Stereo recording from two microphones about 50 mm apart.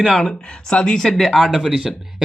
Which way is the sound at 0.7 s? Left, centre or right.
Left.